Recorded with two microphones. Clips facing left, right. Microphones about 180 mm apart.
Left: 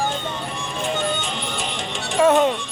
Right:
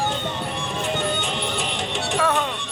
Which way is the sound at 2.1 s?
20° left (ahead or behind).